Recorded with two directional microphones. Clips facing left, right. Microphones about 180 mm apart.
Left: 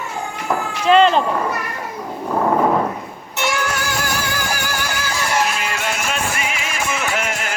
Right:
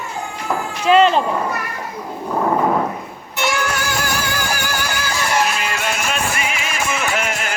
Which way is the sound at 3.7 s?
65° right (ahead or behind).